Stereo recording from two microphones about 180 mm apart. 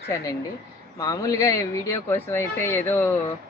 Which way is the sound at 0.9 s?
20° left (ahead or behind).